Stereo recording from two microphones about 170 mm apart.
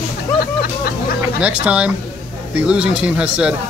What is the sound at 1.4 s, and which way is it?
Speech, 5° right (ahead or behind).